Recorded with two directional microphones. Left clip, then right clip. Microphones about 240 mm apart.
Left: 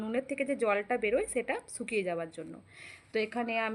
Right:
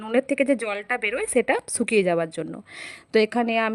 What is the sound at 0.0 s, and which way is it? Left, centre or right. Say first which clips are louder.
Speech: right 11 dB; right.